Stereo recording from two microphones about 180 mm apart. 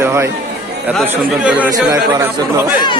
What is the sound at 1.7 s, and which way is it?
Speech, 20° right (ahead or behind).